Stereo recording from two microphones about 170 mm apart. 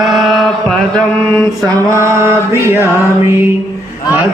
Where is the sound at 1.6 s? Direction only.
15° right (ahead or behind).